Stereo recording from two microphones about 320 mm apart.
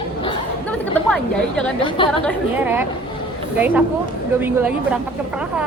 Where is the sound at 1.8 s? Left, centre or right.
Centre.